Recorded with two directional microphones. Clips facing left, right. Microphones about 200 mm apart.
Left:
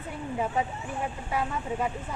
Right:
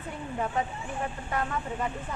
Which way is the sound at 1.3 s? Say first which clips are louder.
Left 2 dB; 10° left (ahead or behind).